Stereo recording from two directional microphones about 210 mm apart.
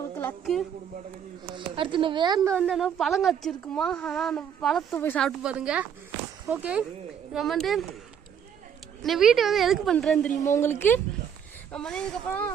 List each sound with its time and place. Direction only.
0.2 s speech: 5° left (ahead or behind)
1.5 s speech: 25° right (ahead or behind)
2.5 s a woman's voice: centre (ahead or behind)
9.0 s a woman's voice: centre (ahead or behind)